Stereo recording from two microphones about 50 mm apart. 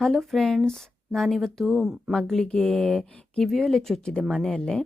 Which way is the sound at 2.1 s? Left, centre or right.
Centre.